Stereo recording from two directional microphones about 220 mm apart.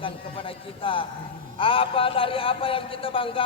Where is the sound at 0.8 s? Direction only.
25° left (ahead or behind).